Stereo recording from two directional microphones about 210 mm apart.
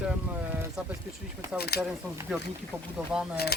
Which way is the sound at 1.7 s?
50° left (ahead or behind).